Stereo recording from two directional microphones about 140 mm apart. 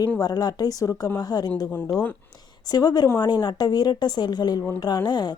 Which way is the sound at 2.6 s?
30° left (ahead or behind).